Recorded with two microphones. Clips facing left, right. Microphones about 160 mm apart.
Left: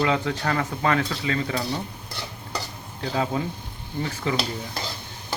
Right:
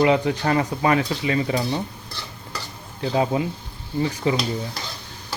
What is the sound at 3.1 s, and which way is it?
Speech, 20° right (ahead or behind).